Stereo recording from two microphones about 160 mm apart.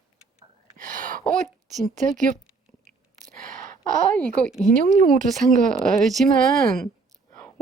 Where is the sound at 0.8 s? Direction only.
55° right (ahead or behind).